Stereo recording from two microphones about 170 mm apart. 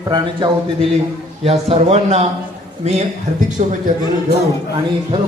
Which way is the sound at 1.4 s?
35° right (ahead or behind).